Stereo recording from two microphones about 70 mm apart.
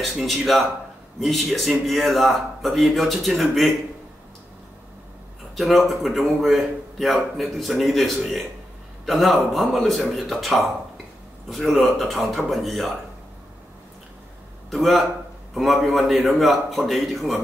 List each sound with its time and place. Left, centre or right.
0.1 s a man's voice: centre
5.6 s a man's voice: centre
14.7 s a man's voice: centre